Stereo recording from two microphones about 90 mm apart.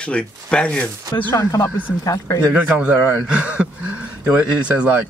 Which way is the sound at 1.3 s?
35° left (ahead or behind).